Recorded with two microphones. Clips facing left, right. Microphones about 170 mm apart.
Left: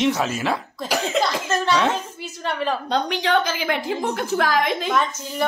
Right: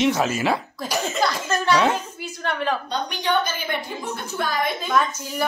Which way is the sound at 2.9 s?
90° left.